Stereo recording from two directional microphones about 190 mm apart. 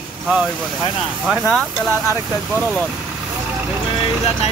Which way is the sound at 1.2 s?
Centre (ahead or behind).